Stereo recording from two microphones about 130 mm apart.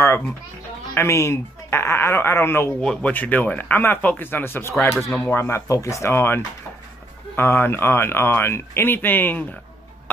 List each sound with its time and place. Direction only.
0.9 s speech: 20° left (ahead or behind)
2.8 s speech: 10° left (ahead or behind)